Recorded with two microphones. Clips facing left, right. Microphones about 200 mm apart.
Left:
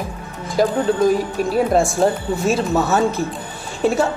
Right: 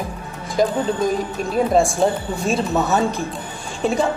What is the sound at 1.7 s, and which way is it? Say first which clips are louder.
Speech: left 1 dB; centre (ahead or behind).